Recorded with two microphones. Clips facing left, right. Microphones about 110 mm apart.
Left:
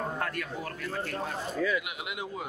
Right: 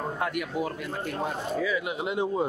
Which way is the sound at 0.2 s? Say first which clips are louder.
Right 5 dB; 15° right (ahead or behind).